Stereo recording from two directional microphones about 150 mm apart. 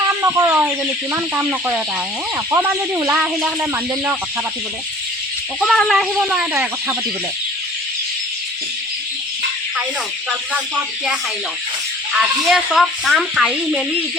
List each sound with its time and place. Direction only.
0.1 s a sound: 20° right (ahead or behind)
1.1 s speech: 10° right (ahead or behind)
5.5 s speech: 5° left (ahead or behind); by 6.9 s 15° right (ahead or behind)
10.5 s speech: 5° right (ahead or behind)